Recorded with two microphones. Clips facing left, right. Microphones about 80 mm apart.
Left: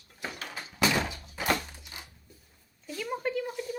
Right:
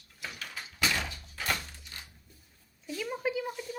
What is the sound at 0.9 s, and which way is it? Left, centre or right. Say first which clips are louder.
Thunk: left 5 dB; centre.